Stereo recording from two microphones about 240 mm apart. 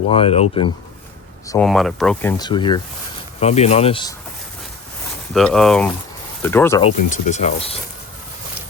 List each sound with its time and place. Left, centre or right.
0.1 s speech: left
1.5 s speech: centre
2.4 s speech: centre
5.3 s speech: centre
6.8 s speech: left